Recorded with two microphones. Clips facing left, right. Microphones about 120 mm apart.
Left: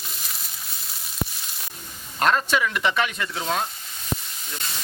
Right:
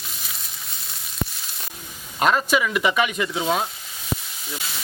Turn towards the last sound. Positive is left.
turn(degrees=-5)  # may be behind; listen again after turning